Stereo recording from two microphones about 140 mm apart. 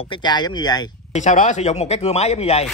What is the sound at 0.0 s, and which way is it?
Speech, 35° left (ahead or behind).